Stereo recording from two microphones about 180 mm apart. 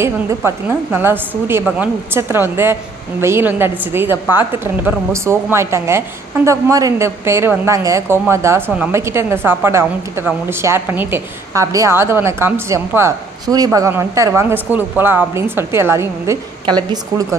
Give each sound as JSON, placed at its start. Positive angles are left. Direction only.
{"t": 0.0, "sound": "a woman's voice", "side_deg": -15}